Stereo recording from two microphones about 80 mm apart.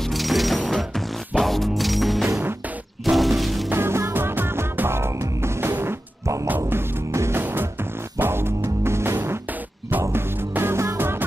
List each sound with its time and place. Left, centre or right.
0.1 s music: centre
3.7 s music: right